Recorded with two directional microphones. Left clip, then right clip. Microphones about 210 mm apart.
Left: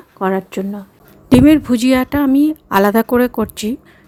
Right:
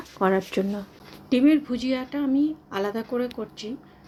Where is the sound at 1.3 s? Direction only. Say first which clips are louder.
Left 10 dB; 60° left (ahead or behind).